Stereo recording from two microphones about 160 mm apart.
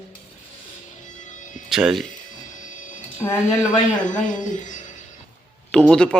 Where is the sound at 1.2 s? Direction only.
50° left (ahead or behind).